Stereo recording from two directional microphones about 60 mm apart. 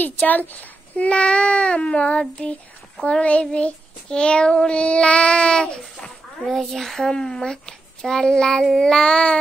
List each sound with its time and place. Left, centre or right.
0.0 s a child's voice: left
3.0 s child singing: centre
6.4 s child singing: centre